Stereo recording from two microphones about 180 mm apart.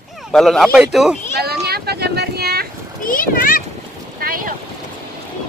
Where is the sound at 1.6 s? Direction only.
60° right (ahead or behind).